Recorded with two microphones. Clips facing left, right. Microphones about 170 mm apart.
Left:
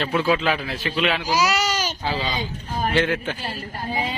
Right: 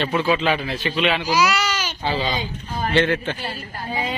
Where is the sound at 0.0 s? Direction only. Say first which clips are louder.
Right 1 dB; centre (ahead or behind).